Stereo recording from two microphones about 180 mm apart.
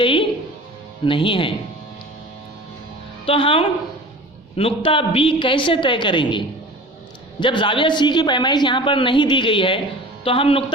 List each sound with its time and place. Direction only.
0.0 s music: 30° left (ahead or behind)
1.0 s a woman's voice: 30° left (ahead or behind)
3.2 s a woman's voice: 30° left (ahead or behind)